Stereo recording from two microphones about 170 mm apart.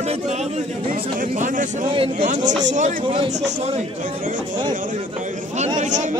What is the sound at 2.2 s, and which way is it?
Speech, 45° right (ahead or behind).